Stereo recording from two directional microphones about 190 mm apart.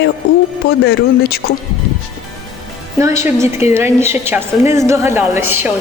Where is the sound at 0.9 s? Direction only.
55° left (ahead or behind).